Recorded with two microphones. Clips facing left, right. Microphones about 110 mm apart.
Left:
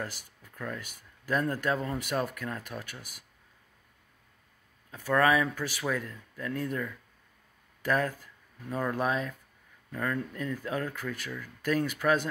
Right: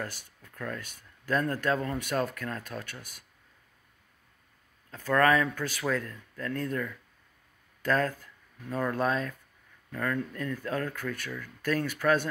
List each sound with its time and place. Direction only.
0.0 s speech: 15° left (ahead or behind)
4.9 s speech: 15° left (ahead or behind)